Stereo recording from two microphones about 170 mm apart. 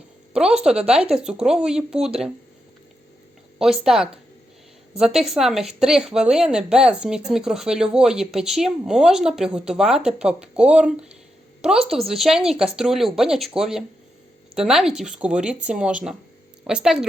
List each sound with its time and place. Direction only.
0.3 s a woman's voice: 5° right (ahead or behind)
3.6 s a woman's voice: 5° right (ahead or behind)